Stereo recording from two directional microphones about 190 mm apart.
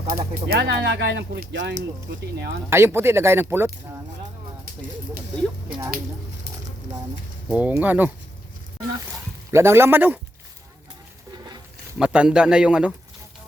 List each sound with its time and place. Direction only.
0.1 s speech: 50° right (ahead or behind)
2.6 s speech: 15° right (ahead or behind)
4.6 s speech: 50° right (ahead or behind)
7.4 s speech: 10° right (ahead or behind)
9.5 s speech: 15° right (ahead or behind)
11.9 s speech: 5° right (ahead or behind)